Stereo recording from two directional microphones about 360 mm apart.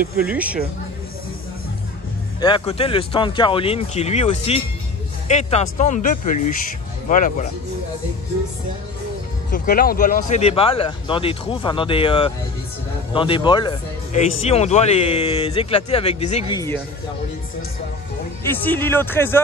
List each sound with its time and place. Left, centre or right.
0.2 s speech: centre
2.4 s speech: centre
9.5 s speech: left
18.4 s speech: centre